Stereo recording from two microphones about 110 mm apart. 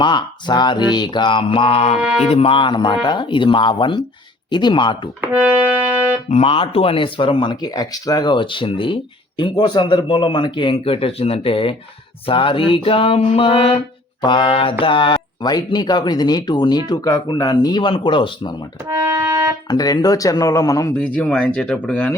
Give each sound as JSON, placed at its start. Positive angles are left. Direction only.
{"t": 0.0, "sound": "speech", "side_deg": 45}
{"t": 2.0, "sound": "music", "side_deg": -5}
{"t": 2.3, "sound": "speech", "side_deg": 55}
{"t": 5.2, "sound": "music", "side_deg": -15}
{"t": 6.2, "sound": "a sound", "side_deg": 70}
{"t": 7.6, "sound": "speech", "side_deg": 35}
{"t": 12.2, "sound": "a sound", "side_deg": 55}
{"t": 14.2, "sound": "speech", "side_deg": 45}
{"t": 18.9, "sound": "music", "side_deg": -25}
{"t": 19.7, "sound": "speech", "side_deg": 35}
{"t": 21.2, "sound": "speech", "side_deg": 5}